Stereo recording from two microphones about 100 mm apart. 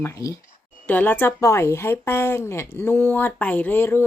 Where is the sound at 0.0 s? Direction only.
30° left (ahead or behind).